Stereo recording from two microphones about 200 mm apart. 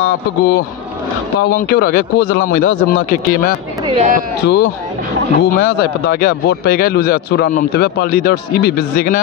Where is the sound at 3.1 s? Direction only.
45° left (ahead or behind).